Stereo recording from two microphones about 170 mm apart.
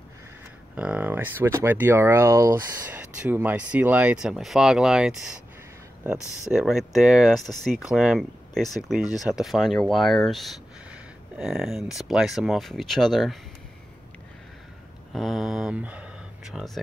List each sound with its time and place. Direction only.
0.7 s speech: 5° right (ahead or behind)
6.1 s speech: 15° left (ahead or behind)
6.5 s speech: 5° right (ahead or behind)
15.1 s speech: centre (ahead or behind)